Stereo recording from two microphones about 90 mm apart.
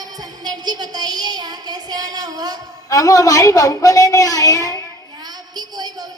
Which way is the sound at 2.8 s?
40° left (ahead or behind).